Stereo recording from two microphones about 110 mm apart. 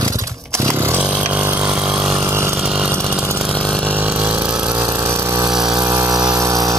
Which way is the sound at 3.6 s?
5° left (ahead or behind).